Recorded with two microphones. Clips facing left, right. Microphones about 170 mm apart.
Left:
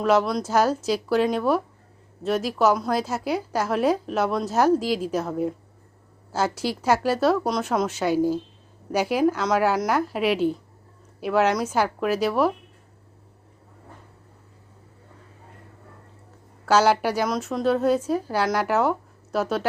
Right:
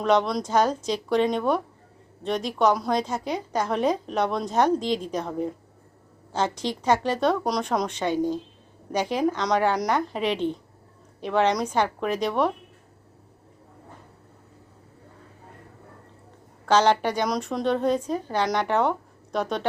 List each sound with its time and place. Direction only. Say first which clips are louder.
0.0 s a woman's voice: left 1 dB; 5° left (ahead or behind)
16.6 s a woman's voice: left 1 dB; 5° left (ahead or behind)